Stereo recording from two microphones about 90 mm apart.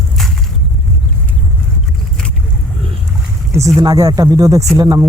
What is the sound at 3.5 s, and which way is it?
A man's voice, 35° right (ahead or behind).